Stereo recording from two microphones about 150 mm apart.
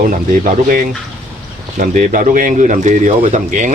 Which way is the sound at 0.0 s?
65° right (ahead or behind).